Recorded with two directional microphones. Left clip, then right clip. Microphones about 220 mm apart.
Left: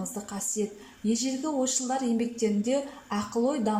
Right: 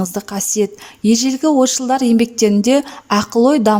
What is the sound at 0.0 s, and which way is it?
A woman's voice, 40° right (ahead or behind).